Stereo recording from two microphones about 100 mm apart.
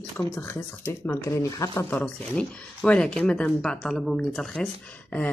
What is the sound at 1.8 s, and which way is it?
Speech, 15° left (ahead or behind).